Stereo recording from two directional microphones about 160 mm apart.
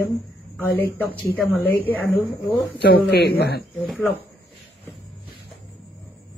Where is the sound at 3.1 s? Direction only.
90° left.